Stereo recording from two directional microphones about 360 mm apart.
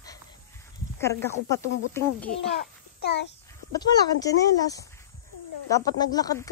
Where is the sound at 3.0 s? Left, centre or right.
Left.